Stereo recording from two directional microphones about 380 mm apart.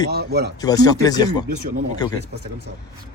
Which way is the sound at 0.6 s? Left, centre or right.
Centre.